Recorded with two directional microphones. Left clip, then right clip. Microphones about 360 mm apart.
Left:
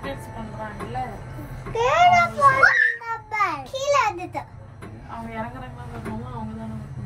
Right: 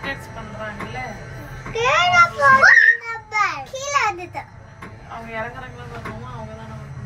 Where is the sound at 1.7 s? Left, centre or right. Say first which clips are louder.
Even; centre.